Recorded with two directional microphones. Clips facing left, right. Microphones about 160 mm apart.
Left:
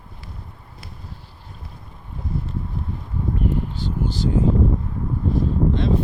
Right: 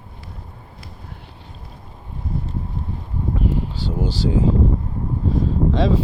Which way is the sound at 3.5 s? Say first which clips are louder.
Right 1 dB; 90° right.